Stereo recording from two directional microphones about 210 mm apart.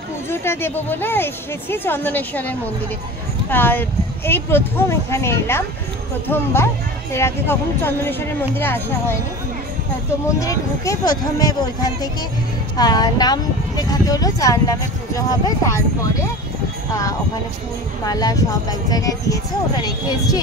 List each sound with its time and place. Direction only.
0.3 s speech: 10° left (ahead or behind)
10.4 s speech: 15° left (ahead or behind)
18.0 s speech: 15° left (ahead or behind)